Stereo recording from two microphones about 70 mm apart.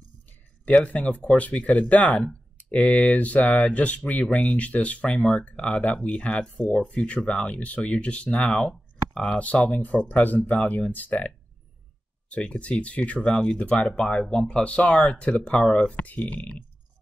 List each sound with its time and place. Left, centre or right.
0.7 s speech: centre